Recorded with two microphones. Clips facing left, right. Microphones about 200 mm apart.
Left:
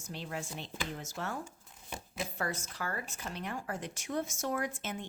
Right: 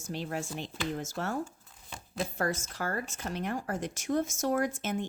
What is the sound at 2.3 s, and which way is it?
Speech, 45° right (ahead or behind).